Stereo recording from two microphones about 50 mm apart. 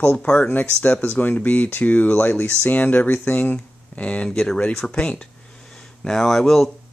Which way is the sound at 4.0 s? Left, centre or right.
Left.